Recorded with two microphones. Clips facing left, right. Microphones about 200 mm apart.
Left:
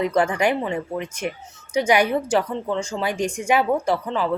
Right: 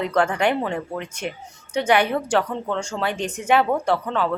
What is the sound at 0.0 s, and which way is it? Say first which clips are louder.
A woman's voice: left 1 dB; 10° left (ahead or behind).